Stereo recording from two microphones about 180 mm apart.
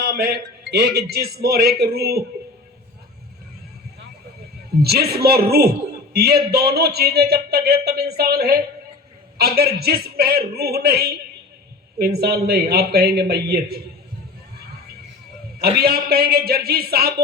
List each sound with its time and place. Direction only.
0.0 s a sound: 60° right (ahead or behind)
0.7 s a man's voice: 65° right (ahead or behind)
4.8 s a man's voice: 60° right (ahead or behind)
15.8 s a man's voice: 60° right (ahead or behind)